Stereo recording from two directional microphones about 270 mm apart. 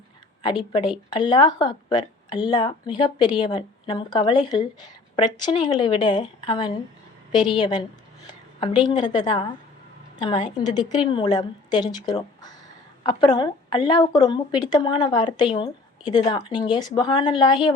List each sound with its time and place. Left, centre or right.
0.4 s a woman's voice: centre